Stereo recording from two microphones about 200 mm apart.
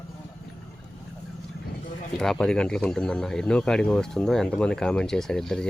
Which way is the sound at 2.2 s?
Centre (ahead or behind).